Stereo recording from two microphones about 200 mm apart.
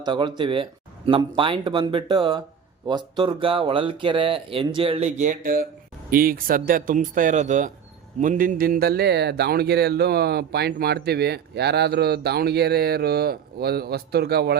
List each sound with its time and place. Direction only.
0.0 s speech: 20° right (ahead or behind); by 14.5 s 55° right (ahead or behind)